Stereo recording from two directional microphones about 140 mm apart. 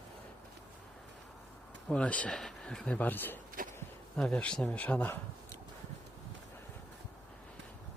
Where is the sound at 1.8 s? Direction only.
10° left (ahead or behind).